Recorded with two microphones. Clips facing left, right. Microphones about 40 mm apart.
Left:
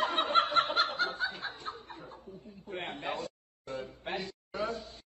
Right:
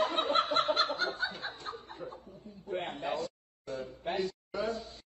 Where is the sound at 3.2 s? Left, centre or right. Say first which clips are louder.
Right 1 dB; left.